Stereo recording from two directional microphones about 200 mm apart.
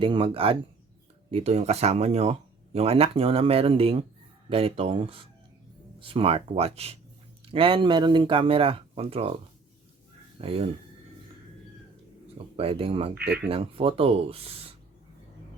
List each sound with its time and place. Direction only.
0.0 s speech: 25° right (ahead or behind)
10.3 s speech: 30° right (ahead or behind)
12.5 s speech: 30° right (ahead or behind)